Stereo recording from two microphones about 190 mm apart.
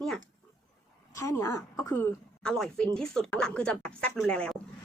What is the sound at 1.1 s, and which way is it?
A woman's voice, 15° left (ahead or behind).